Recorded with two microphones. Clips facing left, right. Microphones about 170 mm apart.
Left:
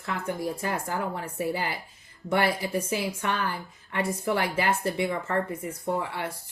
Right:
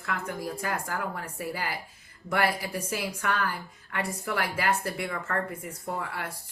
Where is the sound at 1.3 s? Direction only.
Centre (ahead or behind).